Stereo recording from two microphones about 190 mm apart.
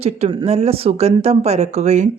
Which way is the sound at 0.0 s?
30° right (ahead or behind).